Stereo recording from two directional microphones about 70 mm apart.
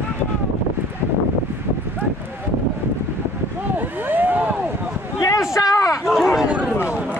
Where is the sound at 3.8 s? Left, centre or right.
Right.